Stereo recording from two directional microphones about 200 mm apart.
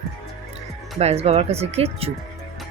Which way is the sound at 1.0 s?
30° right (ahead or behind).